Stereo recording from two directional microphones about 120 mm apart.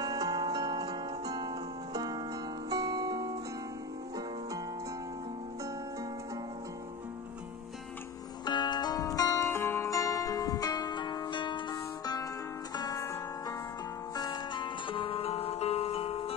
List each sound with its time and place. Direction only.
0.0 s music: 30° right (ahead or behind)
8.5 s music: 35° left (ahead or behind)
14.1 s music: 35° left (ahead or behind); by 16.3 s 55° left (ahead or behind)